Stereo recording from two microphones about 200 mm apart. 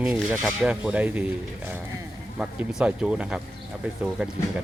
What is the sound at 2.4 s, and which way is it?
Speech, 5° right (ahead or behind).